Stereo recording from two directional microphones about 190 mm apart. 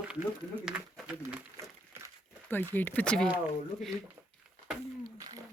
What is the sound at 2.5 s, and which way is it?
Speech, 10° left (ahead or behind).